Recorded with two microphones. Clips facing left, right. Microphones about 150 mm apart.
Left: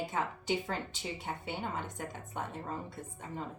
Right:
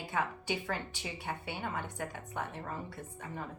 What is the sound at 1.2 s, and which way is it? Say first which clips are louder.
Speech: right 1 dB; 20° left (ahead or behind).